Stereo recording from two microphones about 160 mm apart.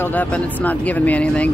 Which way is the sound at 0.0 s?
10° left (ahead or behind).